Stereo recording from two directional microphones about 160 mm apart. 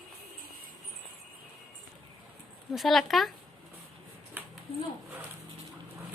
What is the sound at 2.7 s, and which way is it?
Speech, centre (ahead or behind).